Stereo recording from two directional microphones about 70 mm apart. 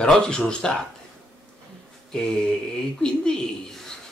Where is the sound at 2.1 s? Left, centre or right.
Centre.